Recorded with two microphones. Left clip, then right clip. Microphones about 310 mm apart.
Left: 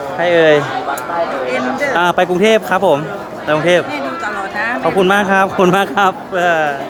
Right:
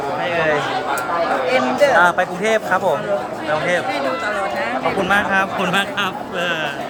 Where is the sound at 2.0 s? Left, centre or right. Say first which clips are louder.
Left 3 dB; left.